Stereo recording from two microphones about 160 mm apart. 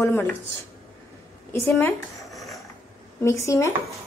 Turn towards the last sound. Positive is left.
turn(degrees=20)  # may be behind; listen again after turning